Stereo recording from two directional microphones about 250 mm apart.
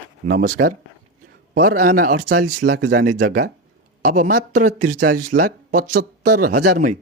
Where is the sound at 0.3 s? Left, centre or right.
Right.